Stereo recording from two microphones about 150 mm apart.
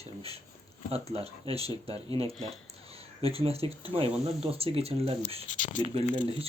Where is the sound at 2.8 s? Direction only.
40° right (ahead or behind).